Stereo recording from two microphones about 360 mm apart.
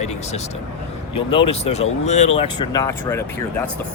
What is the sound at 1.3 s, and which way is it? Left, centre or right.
Speech, centre.